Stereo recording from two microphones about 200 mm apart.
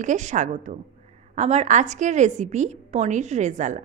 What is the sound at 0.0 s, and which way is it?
A woman's voice, 35° right (ahead or behind).